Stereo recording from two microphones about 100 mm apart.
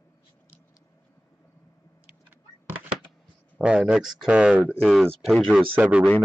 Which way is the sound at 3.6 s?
10° right (ahead or behind).